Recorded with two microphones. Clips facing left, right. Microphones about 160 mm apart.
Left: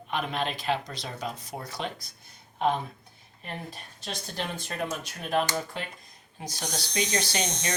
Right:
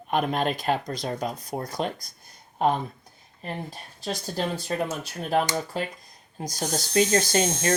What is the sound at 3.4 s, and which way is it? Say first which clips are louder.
Speech: right 4 dB; 35° right (ahead or behind).